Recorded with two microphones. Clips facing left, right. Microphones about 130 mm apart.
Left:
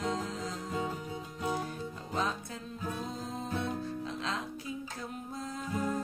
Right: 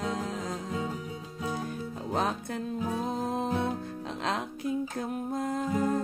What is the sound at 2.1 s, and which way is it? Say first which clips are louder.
Music: right 5 dB; 60° right (ahead or behind).